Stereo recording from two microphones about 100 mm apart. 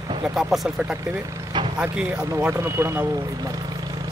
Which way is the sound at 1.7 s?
10° right (ahead or behind).